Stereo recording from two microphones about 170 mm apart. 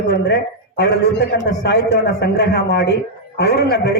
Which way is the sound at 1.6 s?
75° left (ahead or behind).